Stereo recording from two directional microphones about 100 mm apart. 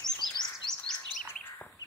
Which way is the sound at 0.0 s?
5° left (ahead or behind).